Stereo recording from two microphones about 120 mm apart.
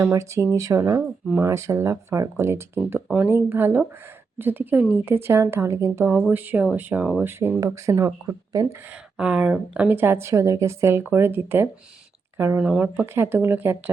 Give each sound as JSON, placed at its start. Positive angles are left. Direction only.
{"t": 0.0, "sound": "speech", "side_deg": -25}
{"t": 9.1, "sound": "speech", "side_deg": -10}